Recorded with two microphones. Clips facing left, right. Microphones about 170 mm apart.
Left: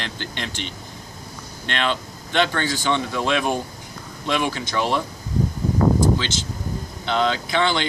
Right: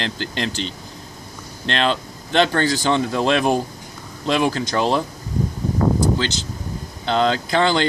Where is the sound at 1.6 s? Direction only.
35° right (ahead or behind).